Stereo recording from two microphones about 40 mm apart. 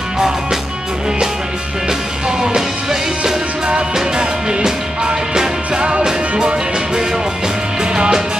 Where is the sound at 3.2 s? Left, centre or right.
Right.